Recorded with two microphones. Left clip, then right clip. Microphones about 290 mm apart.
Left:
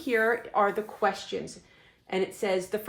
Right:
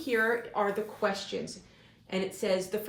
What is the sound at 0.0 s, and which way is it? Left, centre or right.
Speech, left.